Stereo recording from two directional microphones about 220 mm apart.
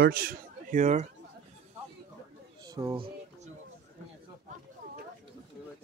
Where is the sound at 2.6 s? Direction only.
15° right (ahead or behind).